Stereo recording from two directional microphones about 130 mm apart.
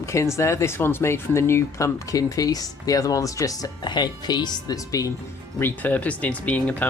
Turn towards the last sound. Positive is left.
turn(degrees=10)  # may be behind; listen again after turning